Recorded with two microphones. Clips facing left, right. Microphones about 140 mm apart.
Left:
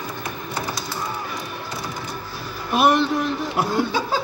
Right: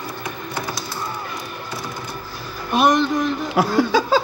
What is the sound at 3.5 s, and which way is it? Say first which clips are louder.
Speech: right 6 dB; 90° right.